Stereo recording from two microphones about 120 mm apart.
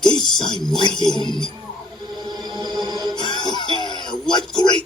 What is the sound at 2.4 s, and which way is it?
Music, 35° right (ahead or behind).